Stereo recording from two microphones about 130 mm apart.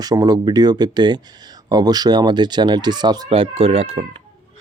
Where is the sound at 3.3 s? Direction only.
50° right (ahead or behind).